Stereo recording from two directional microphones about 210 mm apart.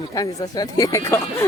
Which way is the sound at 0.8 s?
15° left (ahead or behind).